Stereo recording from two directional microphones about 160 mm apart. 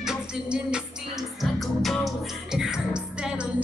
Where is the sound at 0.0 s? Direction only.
5° right (ahead or behind).